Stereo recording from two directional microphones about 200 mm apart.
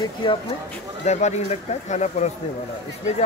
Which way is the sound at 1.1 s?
35° left (ahead or behind).